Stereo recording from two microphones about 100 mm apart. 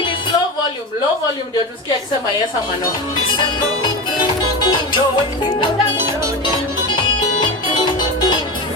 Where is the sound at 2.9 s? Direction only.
50° left (ahead or behind).